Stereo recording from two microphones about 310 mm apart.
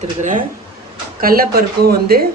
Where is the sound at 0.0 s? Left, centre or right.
Right.